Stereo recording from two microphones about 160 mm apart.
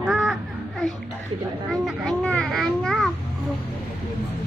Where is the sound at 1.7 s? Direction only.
5° left (ahead or behind).